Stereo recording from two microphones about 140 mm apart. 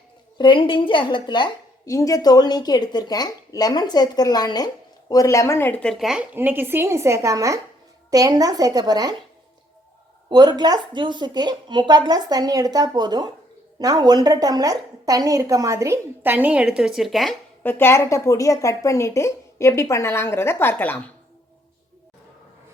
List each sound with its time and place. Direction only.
0.3 s a woman's voice: 35° left (ahead or behind); by 6.2 s centre (ahead or behind)
6.3 s a woman's voice: 15° right (ahead or behind)
10.2 s a woman's voice: 30° right (ahead or behind); by 17.3 s centre (ahead or behind)
17.6 s a woman's voice: 15° left (ahead or behind)